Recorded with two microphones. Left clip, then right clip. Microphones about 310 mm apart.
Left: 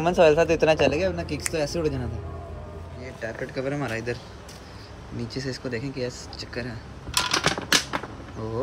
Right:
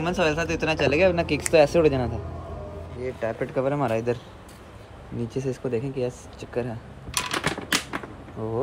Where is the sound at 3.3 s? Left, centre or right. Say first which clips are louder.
Right 4 dB; right.